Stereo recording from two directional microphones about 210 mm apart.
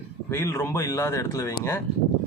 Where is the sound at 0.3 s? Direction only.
15° left (ahead or behind).